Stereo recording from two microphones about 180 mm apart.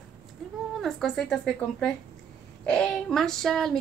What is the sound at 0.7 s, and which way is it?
A woman's voice, centre (ahead or behind).